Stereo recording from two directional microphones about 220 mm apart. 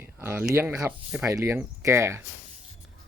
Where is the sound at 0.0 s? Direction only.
10° right (ahead or behind).